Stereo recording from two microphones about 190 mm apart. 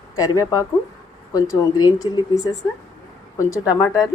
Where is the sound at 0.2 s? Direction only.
20° left (ahead or behind).